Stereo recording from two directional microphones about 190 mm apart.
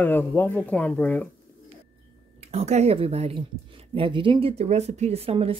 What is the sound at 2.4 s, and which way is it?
Speech, 35° right (ahead or behind).